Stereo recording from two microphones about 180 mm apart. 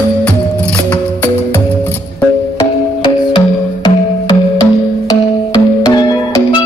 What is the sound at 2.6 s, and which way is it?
Music, 25° left (ahead or behind).